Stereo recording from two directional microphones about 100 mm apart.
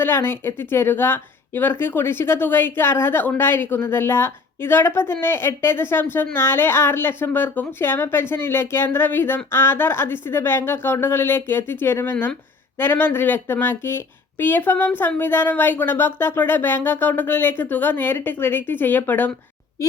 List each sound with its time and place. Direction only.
0.0 s a woman's voice: 25° left (ahead or behind)
12.1 s speech: 10° left (ahead or behind)
12.8 s a woman's voice: 20° left (ahead or behind)